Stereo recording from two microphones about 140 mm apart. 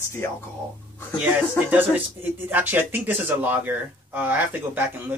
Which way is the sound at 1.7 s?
15° right (ahead or behind).